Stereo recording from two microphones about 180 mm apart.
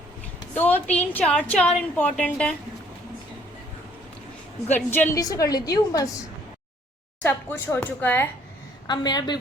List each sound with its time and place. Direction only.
0.5 s a woman's voice: 10° left (ahead or behind)
4.7 s a woman's voice: 10° left (ahead or behind)
7.2 s a woman's voice: 10° left (ahead or behind)
8.9 s a woman's voice: 25° left (ahead or behind)